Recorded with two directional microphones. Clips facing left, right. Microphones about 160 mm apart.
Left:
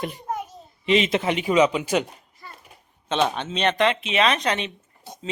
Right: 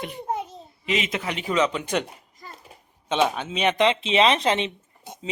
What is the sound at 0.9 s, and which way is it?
Speech, 30° left (ahead or behind).